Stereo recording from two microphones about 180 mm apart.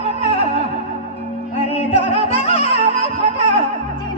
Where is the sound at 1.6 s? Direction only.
30° left (ahead or behind).